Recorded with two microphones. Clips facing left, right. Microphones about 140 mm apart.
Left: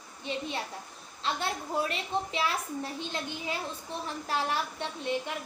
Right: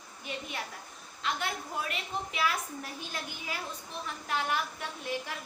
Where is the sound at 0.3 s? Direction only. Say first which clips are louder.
Left 5 dB; 30° left (ahead or behind).